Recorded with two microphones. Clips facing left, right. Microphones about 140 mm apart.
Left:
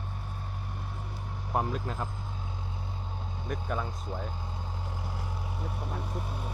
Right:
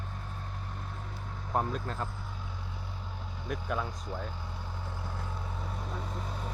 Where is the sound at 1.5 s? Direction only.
10° left (ahead or behind).